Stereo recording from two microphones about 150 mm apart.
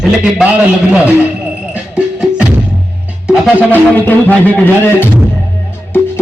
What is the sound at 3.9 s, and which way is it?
A man's voice, 10° left (ahead or behind).